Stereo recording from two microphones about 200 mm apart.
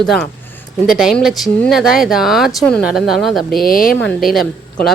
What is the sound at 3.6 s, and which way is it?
Speech, 45° left (ahead or behind).